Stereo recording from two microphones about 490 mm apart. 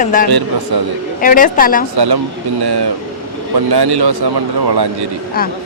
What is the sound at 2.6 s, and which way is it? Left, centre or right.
A man's voice, right.